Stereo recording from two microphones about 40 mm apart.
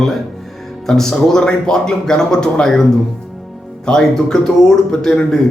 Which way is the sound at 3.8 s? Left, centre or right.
Centre.